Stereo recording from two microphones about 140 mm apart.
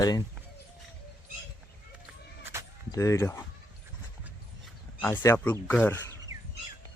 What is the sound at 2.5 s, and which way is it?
Bleat, 20° right (ahead or behind).